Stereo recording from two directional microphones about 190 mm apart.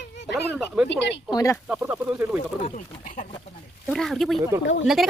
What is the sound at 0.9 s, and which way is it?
Speech, 65° left (ahead or behind).